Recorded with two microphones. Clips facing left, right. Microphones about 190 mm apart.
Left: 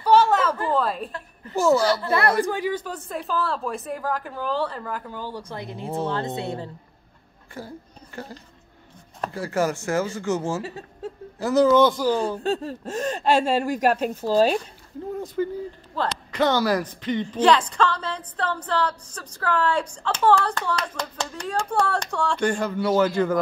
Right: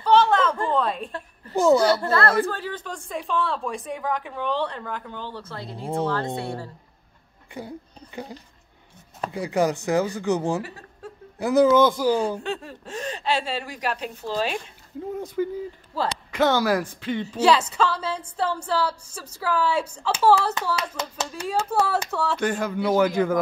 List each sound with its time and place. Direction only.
0.0 s chuckle: 10° left (ahead or behind)
1.5 s speech: 15° right (ahead or behind)
2.0 s a woman's voice: 15° left (ahead or behind)
7.5 s speech: 15° right (ahead or behind)
10.6 s speech: 25° left (ahead or behind)
11.3 s speech: 15° right (ahead or behind)
12.4 s a woman's voice: 40° left (ahead or behind)
15.1 s speech: 10° right (ahead or behind)